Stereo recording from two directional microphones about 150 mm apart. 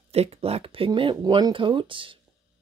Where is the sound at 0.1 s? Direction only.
45° right (ahead or behind).